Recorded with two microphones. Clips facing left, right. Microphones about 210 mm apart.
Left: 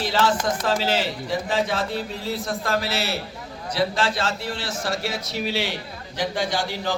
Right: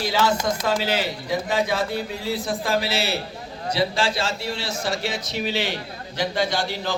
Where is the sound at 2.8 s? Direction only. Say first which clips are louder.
Right 1 dB; 30° right (ahead or behind).